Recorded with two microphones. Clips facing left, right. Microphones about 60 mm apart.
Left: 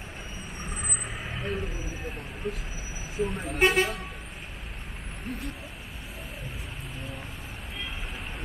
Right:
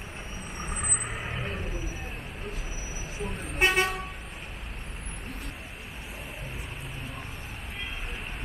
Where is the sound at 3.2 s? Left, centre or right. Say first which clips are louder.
Left 3 dB; centre.